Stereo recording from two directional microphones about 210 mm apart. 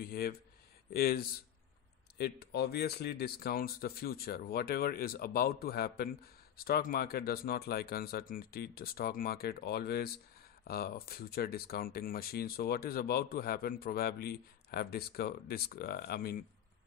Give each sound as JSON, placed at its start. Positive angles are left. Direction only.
{"t": 0.0, "sound": "speech", "side_deg": 45}
{"t": 2.4, "sound": "speech", "side_deg": 50}